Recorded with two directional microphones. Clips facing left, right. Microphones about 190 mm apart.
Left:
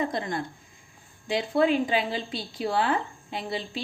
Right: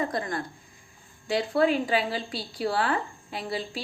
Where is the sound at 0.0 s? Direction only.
25° left (ahead or behind).